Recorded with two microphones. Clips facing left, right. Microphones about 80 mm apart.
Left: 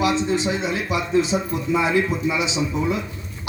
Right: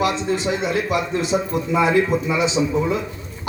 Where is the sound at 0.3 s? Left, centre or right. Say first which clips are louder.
Right 2 dB; right.